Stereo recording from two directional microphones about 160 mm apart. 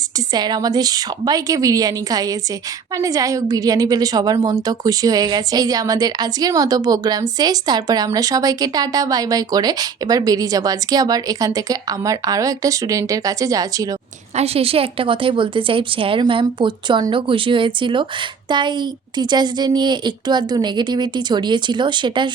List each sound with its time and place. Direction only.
0.3 s a woman's voice: 25° right (ahead or behind)
14.3 s a woman's voice: 40° right (ahead or behind)